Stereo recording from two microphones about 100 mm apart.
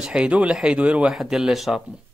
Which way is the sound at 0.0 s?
10° right (ahead or behind).